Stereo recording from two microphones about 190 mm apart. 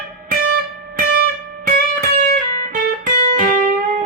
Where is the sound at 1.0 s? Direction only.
50° right (ahead or behind).